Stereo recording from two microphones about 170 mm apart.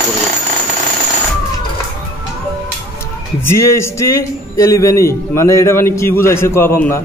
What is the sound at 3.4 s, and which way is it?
A man's voice, 15° left (ahead or behind).